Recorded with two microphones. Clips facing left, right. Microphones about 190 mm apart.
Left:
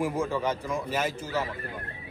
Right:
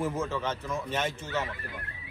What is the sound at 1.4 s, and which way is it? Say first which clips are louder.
Speech: left 3 dB; 35° left (ahead or behind).